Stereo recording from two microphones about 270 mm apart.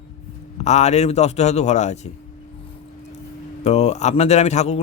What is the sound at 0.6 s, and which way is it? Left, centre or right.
A man's voice, left.